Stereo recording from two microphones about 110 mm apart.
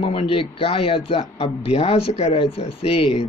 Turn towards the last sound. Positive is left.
turn(degrees=60)  # may be behind; listen again after turning